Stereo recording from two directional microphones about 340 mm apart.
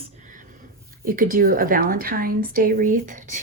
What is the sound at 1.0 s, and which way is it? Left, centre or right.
A woman's voice, right.